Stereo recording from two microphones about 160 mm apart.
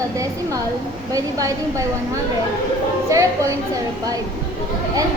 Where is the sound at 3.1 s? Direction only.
20° right (ahead or behind).